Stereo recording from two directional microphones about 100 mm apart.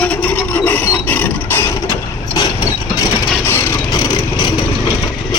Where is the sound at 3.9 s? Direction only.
40° left (ahead or behind).